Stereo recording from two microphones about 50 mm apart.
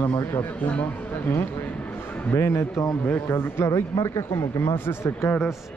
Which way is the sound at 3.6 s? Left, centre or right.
Left.